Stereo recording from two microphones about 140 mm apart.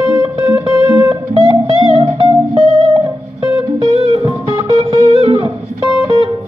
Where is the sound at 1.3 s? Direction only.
30° right (ahead or behind).